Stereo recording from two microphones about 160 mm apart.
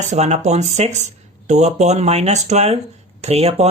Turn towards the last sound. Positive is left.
turn(degrees=-40)  # may be behind; listen again after turning